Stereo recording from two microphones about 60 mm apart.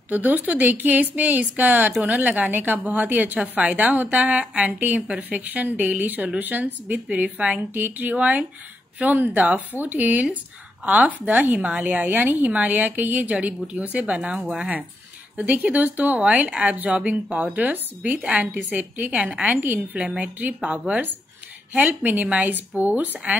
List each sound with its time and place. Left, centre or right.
0.1 s a woman's voice: right
8.2 s a woman's voice: right
15.3 s a woman's voice: right
19.6 s a woman's voice: right